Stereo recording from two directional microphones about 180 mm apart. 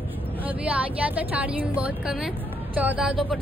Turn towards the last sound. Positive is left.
turn(degrees=0)  # may be behind; listen again after turning